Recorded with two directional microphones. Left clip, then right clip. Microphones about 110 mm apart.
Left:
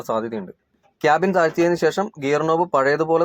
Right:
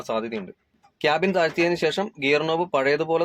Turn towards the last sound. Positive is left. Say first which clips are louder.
# left 4 dB
turn(degrees=20)  # may be behind; listen again after turning